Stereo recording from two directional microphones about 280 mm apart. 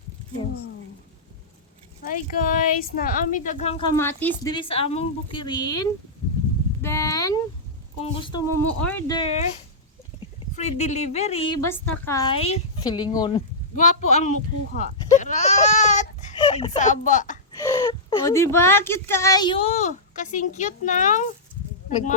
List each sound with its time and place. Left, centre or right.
2.0 s speech: left
3.9 s a woman's voice: centre
6.8 s a sound: centre
8.1 s a woman's voice: centre
10.5 s speech: left
11.6 s a woman's voice: centre; by 17.3 s left
17.6 s speech: centre